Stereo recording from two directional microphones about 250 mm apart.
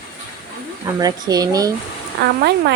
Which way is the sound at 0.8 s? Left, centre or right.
Centre.